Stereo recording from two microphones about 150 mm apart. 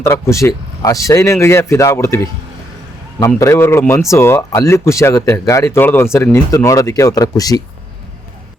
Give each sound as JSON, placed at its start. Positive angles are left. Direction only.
{"t": 0.0, "sound": "speech", "side_deg": 20}